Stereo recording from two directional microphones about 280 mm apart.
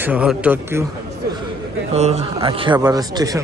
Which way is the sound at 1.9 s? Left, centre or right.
Right.